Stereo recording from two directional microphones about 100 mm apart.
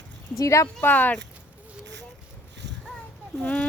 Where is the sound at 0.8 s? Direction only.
20° left (ahead or behind).